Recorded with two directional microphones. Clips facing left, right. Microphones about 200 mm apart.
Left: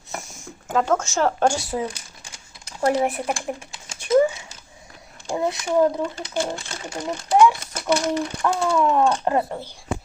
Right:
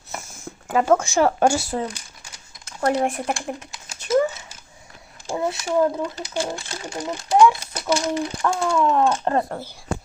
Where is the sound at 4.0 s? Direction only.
15° left (ahead or behind).